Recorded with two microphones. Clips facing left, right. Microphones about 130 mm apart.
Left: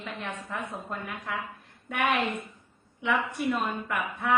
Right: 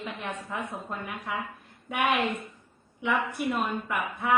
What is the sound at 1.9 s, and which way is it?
A woman's voice, 5° right (ahead or behind).